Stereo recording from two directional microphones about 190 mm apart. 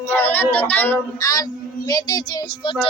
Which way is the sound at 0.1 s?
10° left (ahead or behind).